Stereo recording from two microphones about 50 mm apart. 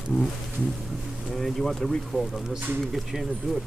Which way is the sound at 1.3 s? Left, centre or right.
Centre.